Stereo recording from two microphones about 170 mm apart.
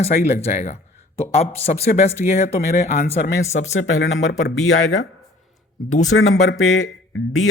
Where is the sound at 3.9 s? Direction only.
80° left.